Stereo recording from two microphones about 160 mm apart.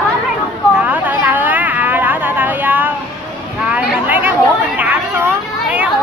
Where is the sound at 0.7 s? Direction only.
10° right (ahead or behind).